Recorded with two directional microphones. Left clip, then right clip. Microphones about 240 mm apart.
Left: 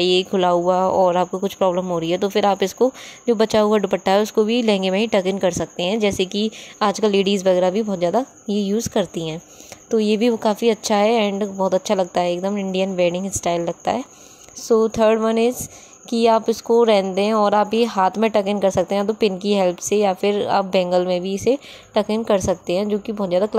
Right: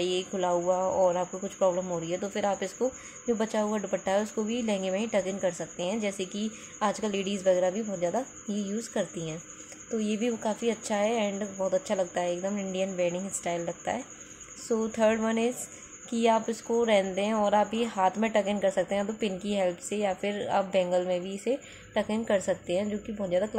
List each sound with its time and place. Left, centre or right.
0.0 s speech: left